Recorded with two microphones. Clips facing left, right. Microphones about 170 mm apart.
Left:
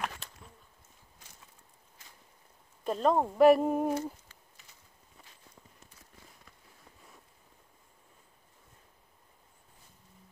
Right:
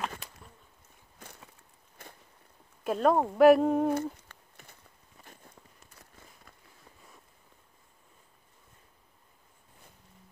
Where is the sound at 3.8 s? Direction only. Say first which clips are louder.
Right 3 dB; 60° right (ahead or behind).